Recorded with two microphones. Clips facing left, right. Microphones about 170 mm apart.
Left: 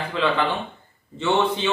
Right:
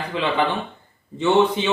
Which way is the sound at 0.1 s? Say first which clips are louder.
Right 1 dB; 15° right (ahead or behind).